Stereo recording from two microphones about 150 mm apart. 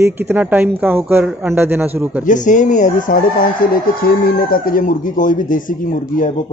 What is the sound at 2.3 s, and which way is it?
Crowing, 55° left (ahead or behind).